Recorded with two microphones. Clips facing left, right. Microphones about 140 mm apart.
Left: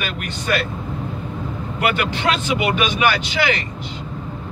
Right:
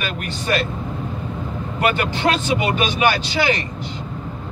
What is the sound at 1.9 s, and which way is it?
Speech, 35° right (ahead or behind).